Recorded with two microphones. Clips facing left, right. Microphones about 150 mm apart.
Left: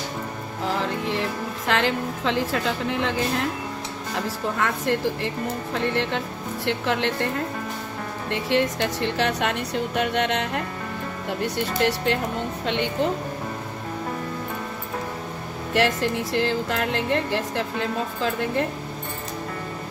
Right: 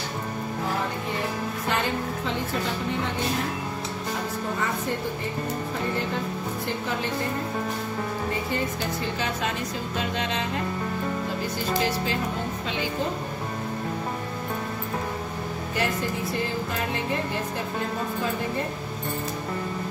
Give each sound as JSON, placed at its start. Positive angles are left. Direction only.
{"t": 1.7, "sound": "a woman's voice", "side_deg": 90}
{"t": 4.6, "sound": "speech", "side_deg": 85}
{"t": 8.3, "sound": "speech", "side_deg": 80}
{"t": 15.7, "sound": "speech", "side_deg": 85}